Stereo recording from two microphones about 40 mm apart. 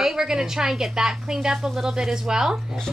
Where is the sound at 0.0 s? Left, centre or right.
Centre.